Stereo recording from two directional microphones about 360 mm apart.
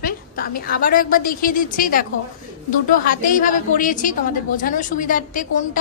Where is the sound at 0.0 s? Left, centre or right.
Left.